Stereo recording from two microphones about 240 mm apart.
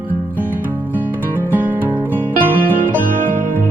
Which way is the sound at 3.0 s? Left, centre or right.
Right.